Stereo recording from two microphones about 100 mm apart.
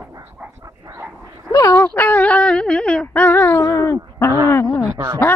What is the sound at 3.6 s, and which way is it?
Speech, 30° left (ahead or behind).